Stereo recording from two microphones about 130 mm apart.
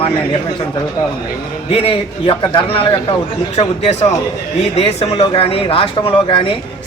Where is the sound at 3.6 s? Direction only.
55° left (ahead or behind).